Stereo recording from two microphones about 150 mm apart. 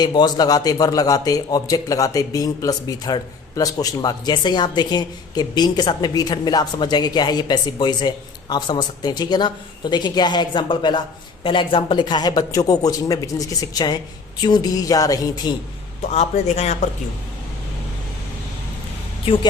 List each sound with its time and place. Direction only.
0.0 s a man's voice: 30° left (ahead or behind)
16.1 s a man's voice: 45° left (ahead or behind)
19.2 s speech: 35° left (ahead or behind)